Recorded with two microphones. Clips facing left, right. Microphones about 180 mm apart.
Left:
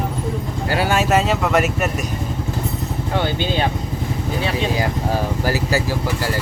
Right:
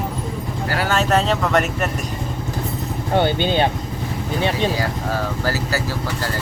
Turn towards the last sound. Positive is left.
turn(degrees=15)  # may be behind; listen again after turning